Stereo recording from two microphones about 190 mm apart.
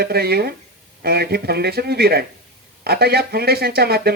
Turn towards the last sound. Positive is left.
turn(degrees=-55)  # may be behind; listen again after turning